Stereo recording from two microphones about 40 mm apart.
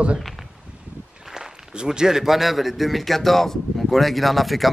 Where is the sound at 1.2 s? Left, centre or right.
Centre.